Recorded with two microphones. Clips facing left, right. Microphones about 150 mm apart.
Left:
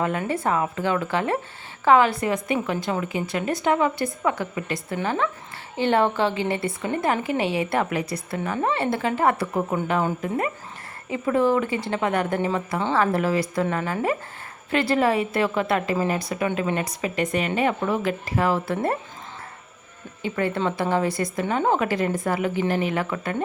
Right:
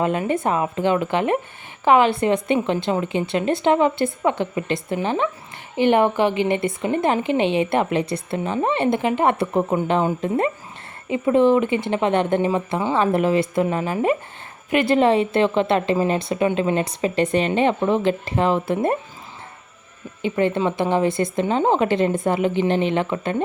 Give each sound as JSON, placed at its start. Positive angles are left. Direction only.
{"t": 0.0, "sound": "speech", "side_deg": -20}
{"t": 20.2, "sound": "speech", "side_deg": -20}